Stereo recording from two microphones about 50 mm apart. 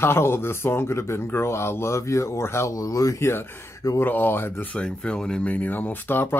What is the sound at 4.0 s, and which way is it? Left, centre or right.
Speech, left.